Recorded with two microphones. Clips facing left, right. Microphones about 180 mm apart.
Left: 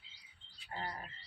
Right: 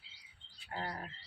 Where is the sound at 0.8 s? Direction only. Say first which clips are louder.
Right 2 dB; 65° right (ahead or behind).